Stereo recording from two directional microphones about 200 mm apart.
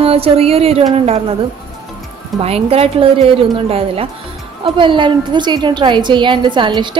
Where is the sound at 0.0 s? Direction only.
30° right (ahead or behind).